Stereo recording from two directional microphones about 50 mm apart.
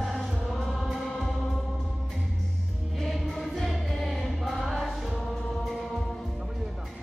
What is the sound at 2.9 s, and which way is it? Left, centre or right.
Choir, centre.